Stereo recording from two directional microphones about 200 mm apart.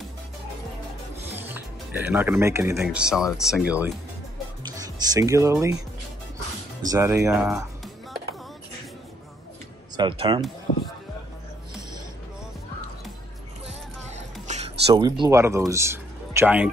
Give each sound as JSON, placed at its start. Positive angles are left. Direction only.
{"t": 1.5, "sound": "speech", "side_deg": -10}
{"t": 2.8, "sound": "speech", "side_deg": -5}
{"t": 4.6, "sound": "speech", "side_deg": -20}
{"t": 6.9, "sound": "speech", "side_deg": -15}
{"t": 7.2, "sound": "music", "side_deg": 0}
{"t": 9.9, "sound": "speech", "side_deg": -25}
{"t": 14.1, "sound": "music", "side_deg": -35}
{"t": 15.0, "sound": "speech", "side_deg": -20}